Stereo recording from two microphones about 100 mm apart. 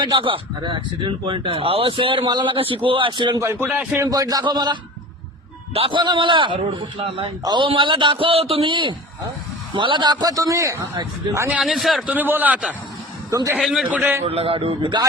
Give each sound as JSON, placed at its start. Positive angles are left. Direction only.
{"t": 0.0, "sound": "speech", "side_deg": -55}
{"t": 3.3, "sound": "a man's voice", "side_deg": -25}
{"t": 4.0, "sound": "a man's voice", "side_deg": -40}
{"t": 5.9, "sound": "speech", "side_deg": -50}
{"t": 7.4, "sound": "a man's voice", "side_deg": -50}
{"t": 11.6, "sound": "a man's voice", "side_deg": 0}
{"t": 12.0, "sound": "a man's voice", "side_deg": -15}
{"t": 13.3, "sound": "a man's voice", "side_deg": -35}
{"t": 13.9, "sound": "a man's voice", "side_deg": -20}
{"t": 14.3, "sound": "a man's voice", "side_deg": -75}